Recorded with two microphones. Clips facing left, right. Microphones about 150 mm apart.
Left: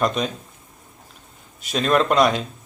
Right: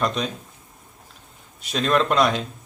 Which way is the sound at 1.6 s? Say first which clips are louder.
Left 2 dB; centre (ahead or behind).